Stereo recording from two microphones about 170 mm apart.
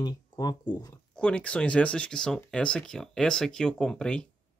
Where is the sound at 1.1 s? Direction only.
5° left (ahead or behind).